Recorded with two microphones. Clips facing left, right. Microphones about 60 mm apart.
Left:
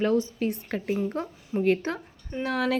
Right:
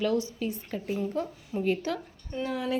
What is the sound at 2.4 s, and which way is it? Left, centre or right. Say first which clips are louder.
Speech: left 4 dB; left.